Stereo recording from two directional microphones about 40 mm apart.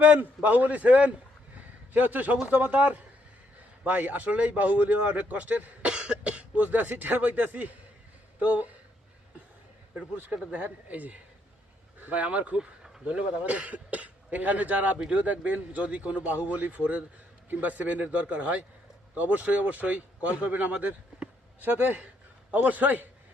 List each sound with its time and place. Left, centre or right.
0.0 s a man's voice: right
5.9 s cough: right
6.6 s a man's voice: right
10.5 s a man's voice: right
12.5 s a sound: centre
13.1 s a man's voice: right
21.6 s a man's voice: right